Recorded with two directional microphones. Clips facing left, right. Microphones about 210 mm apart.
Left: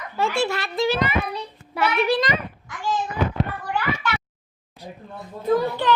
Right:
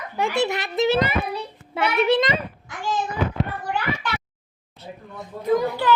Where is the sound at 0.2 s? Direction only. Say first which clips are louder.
Even; 20° right (ahead or behind).